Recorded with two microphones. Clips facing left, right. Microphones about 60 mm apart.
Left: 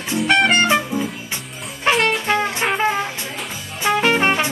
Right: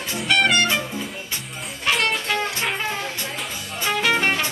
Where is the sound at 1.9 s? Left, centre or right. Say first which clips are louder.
Left 5 dB; left.